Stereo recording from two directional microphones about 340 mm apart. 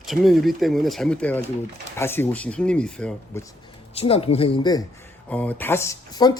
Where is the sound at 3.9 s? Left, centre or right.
Centre.